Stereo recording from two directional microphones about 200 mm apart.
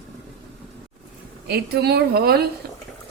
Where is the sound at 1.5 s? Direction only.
55° right (ahead or behind).